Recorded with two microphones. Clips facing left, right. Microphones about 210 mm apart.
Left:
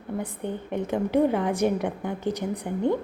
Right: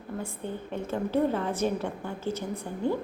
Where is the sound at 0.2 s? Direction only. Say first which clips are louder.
Left 3 dB; 20° left (ahead or behind).